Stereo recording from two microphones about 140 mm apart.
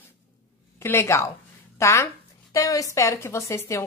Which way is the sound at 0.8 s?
20° left (ahead or behind).